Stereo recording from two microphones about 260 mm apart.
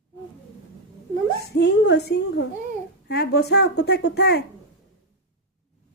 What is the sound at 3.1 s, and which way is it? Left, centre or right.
Speech, left.